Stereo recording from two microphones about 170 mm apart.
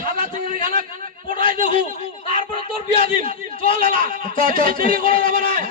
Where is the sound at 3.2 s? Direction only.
30° left (ahead or behind).